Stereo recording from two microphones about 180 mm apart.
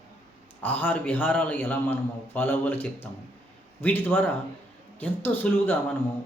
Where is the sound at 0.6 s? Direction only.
10° left (ahead or behind).